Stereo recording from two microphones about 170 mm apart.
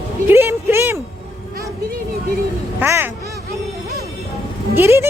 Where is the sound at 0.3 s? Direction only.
15° right (ahead or behind).